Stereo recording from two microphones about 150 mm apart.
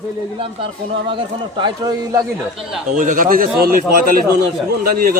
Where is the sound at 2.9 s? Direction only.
65° right (ahead or behind).